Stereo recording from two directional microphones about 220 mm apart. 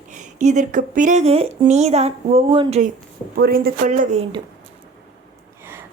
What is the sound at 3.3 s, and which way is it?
A woman's voice, 45° right (ahead or behind).